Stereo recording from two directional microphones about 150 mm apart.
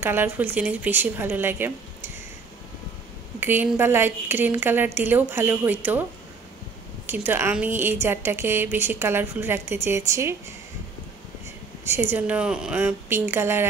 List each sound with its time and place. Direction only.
0.0 s a woman's voice: 15° right (ahead or behind)
3.3 s a woman's voice: 15° right (ahead or behind)
7.1 s a woman's voice: 15° right (ahead or behind)
11.8 s a woman's voice: 15° right (ahead or behind)